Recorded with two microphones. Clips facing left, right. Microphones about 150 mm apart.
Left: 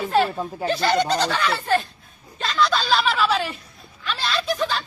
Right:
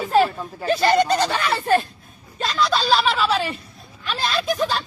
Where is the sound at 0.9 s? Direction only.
45° right (ahead or behind).